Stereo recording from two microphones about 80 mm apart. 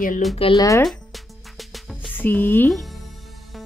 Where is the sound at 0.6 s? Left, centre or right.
Left.